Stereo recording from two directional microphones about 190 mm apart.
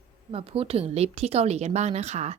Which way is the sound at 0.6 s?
30° right (ahead or behind).